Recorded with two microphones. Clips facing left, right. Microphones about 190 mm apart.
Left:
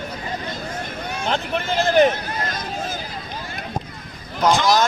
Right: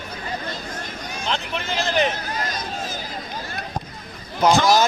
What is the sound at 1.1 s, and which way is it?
Speech, 50° left (ahead or behind).